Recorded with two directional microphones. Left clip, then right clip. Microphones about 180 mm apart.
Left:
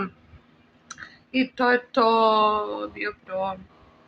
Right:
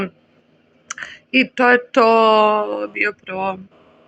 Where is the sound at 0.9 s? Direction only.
35° right (ahead or behind).